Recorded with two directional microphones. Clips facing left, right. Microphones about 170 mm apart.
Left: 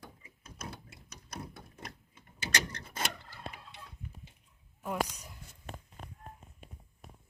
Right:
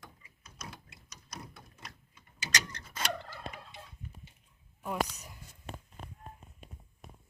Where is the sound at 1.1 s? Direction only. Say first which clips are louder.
Left 3 dB; 55° left (ahead or behind).